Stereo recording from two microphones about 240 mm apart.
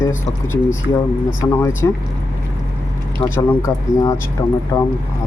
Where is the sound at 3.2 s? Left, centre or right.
Centre.